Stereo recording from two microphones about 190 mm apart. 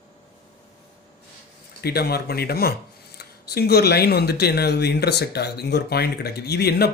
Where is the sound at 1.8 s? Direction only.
55° left (ahead or behind).